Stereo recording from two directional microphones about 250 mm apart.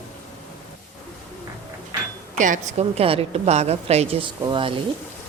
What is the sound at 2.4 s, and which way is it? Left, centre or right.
A woman's voice, right.